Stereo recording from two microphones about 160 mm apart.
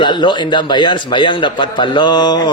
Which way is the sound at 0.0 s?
30° left (ahead or behind).